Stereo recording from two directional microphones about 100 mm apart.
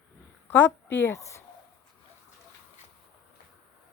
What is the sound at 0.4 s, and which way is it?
Speech, 20° left (ahead or behind).